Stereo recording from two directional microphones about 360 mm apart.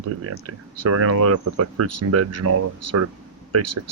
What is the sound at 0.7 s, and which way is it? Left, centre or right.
Speech, right.